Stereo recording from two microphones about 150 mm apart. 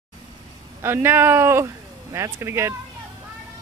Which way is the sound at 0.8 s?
15° right (ahead or behind).